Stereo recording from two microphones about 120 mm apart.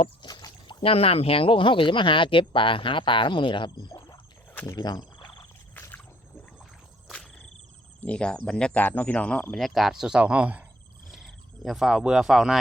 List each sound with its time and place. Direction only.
0.0 s speech: 40° left (ahead or behind)
4.5 s speech: 20° left (ahead or behind)
4.8 s frog: 35° left (ahead or behind)
5.7 s rowboat: 15° left (ahead or behind)
7.1 s insect: 5° left (ahead or behind)
8.0 s speech: 10° left (ahead or behind); by 10.7 s 10° right (ahead or behind)
11.1 s speech: centre (ahead or behind)